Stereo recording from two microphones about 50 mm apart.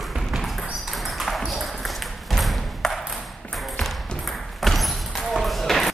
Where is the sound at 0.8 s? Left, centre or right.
Centre.